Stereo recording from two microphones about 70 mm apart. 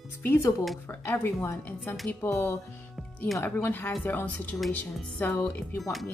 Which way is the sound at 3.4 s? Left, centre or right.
Left.